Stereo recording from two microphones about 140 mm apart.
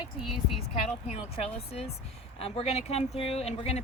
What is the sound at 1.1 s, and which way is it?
Speech, 45° left (ahead or behind).